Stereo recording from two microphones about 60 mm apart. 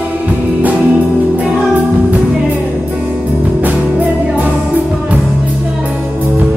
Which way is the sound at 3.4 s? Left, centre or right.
Right.